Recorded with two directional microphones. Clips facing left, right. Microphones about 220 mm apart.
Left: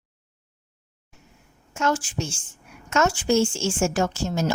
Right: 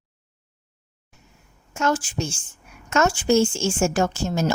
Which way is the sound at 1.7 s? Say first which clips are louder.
Right 1 dB; 45° right (ahead or behind).